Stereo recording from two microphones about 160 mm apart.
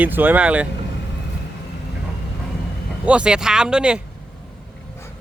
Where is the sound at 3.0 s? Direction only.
5° right (ahead or behind).